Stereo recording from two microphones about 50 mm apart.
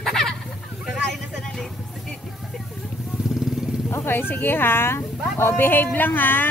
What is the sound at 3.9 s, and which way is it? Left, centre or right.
Speech, left.